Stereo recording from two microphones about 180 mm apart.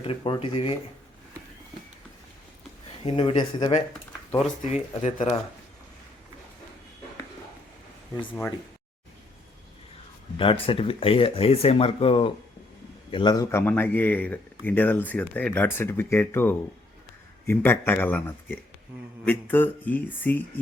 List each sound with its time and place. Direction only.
0.0 s speech: 30° left (ahead or behind)
3.0 s speech: 30° left (ahead or behind)
10.3 s speech: 30° left (ahead or behind); by 20.4 s 10° left (ahead or behind)